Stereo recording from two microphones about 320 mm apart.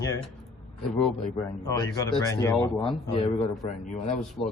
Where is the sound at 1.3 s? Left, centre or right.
Centre.